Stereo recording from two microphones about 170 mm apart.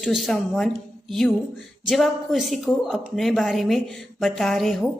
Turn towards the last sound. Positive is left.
turn(degrees=0)  # may be behind; listen again after turning